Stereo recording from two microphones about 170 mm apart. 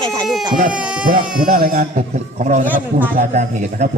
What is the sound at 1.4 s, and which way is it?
A man's voice, 50° right (ahead or behind).